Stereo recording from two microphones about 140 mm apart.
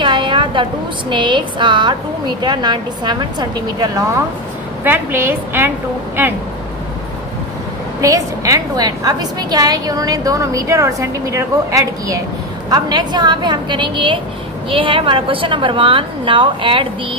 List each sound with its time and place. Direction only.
0.0 s a sound: 35° right (ahead or behind)
1.1 s a woman's voice: 35° right (ahead or behind)
4.8 s a woman's voice: 15° right (ahead or behind)
8.0 s a woman's voice: 25° right (ahead or behind)